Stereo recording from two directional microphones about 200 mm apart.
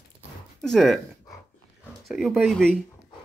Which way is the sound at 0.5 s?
Centre (ahead or behind).